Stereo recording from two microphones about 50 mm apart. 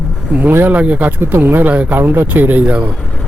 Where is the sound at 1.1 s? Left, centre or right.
Right.